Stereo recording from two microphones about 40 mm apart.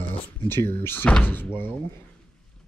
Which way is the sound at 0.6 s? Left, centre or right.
Left.